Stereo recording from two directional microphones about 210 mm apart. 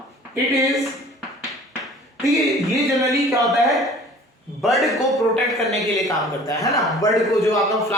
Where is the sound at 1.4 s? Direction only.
Centre (ahead or behind).